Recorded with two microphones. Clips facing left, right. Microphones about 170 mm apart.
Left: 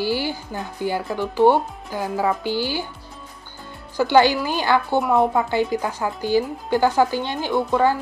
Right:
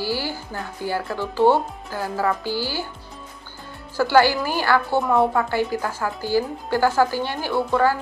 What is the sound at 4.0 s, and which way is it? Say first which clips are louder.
A woman's voice: left 1 dB; 20° left (ahead or behind).